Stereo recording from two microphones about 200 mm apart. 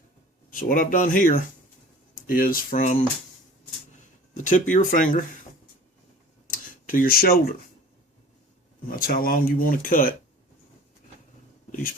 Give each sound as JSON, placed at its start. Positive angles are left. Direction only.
{"t": 0.7, "sound": "speech", "side_deg": 45}
{"t": 4.4, "sound": "speech", "side_deg": 40}
{"t": 6.5, "sound": "tick-tock", "side_deg": 45}
{"t": 8.9, "sound": "speech", "side_deg": 45}